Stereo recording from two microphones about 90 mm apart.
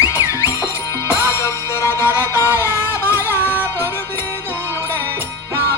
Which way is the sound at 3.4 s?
25° right (ahead or behind).